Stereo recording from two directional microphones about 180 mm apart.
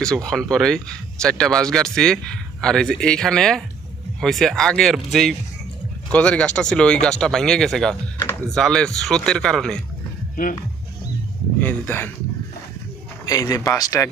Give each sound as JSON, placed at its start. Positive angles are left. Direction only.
{"t": 0.0, "sound": "speech", "side_deg": 5}
{"t": 11.6, "sound": "speech", "side_deg": 10}
{"t": 13.2, "sound": "speech", "side_deg": 20}